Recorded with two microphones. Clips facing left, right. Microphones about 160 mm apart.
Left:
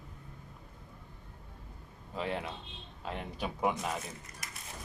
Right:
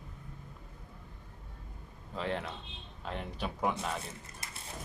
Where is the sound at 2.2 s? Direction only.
10° left (ahead or behind).